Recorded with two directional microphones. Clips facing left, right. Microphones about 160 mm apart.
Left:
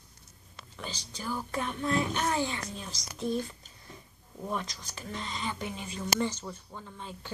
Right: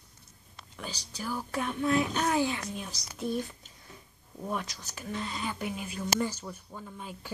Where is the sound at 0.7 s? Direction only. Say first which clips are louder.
Even; 10° right (ahead or behind).